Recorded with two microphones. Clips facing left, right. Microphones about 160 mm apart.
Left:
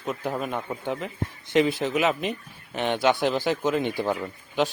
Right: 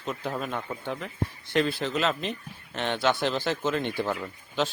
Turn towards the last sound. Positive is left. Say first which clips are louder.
# left 3 dB
turn(degrees=15)  # may be behind; listen again after turning